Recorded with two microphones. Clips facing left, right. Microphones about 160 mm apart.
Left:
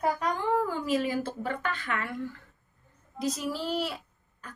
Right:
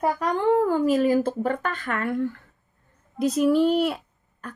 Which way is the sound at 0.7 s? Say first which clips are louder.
Right 9 dB; 45° right (ahead or behind).